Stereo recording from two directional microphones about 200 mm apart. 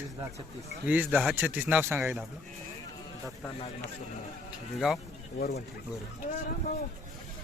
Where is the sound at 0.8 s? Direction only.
10° right (ahead or behind).